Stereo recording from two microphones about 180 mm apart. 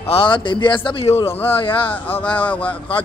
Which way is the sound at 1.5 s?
30° left (ahead or behind).